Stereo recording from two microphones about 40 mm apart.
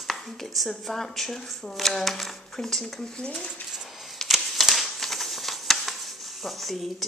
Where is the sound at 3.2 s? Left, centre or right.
Left.